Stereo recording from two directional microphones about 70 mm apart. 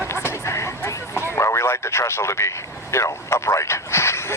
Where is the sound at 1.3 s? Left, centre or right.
Left.